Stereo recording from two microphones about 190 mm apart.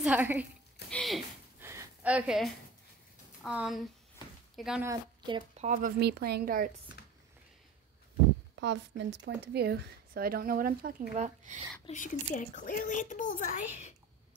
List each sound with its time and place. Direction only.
0.0 s a woman's voice: 10° right (ahead or behind)
0.8 s a sound: 5° left (ahead or behind)
1.6 s a sound: 15° right (ahead or behind)
3.4 s speech: 5° right (ahead or behind)
4.8 s a woman's voice: 25° right (ahead or behind)
5.6 s speech: 40° right (ahead or behind)
8.5 s a woman's voice: 65° right (ahead or behind); by 11.6 s 35° right (ahead or behind)
11.9 s speech: 40° left (ahead or behind)